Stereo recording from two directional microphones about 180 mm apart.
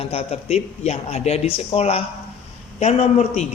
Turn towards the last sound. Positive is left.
turn(degrees=40)  # may be behind; listen again after turning